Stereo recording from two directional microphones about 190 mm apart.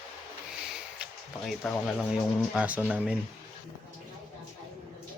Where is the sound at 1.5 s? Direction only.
Centre (ahead or behind).